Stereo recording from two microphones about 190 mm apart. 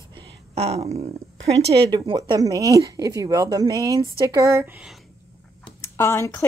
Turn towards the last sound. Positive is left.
turn(degrees=15)  # may be behind; listen again after turning